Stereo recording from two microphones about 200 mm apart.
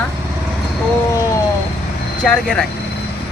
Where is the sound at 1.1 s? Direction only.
15° left (ahead or behind).